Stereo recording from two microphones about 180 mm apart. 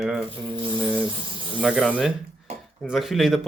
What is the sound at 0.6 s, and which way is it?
Speech, 10° right (ahead or behind).